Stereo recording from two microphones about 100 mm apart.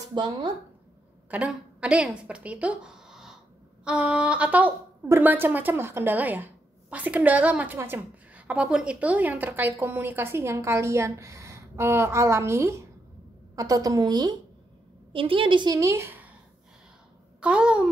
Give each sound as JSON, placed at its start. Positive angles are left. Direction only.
{"t": 0.1, "sound": "speech", "side_deg": -50}
{"t": 1.8, "sound": "speech", "side_deg": -5}
{"t": 3.8, "sound": "a sound", "side_deg": -10}
{"t": 5.0, "sound": "a woman's voice", "side_deg": -20}
{"t": 15.1, "sound": "a woman's voice", "side_deg": -60}
{"t": 15.7, "sound": "speech", "side_deg": -30}
{"t": 17.4, "sound": "a sound", "side_deg": -10}